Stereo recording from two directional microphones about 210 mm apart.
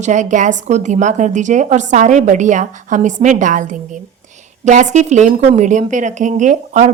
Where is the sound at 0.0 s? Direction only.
35° right (ahead or behind).